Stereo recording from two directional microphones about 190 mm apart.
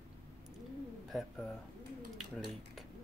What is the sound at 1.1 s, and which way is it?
Speech, centre (ahead or behind).